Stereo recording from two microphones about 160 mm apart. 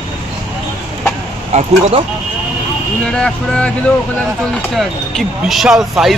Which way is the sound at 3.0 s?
5° left (ahead or behind).